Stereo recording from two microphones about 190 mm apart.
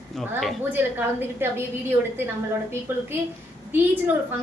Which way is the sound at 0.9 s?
10° right (ahead or behind).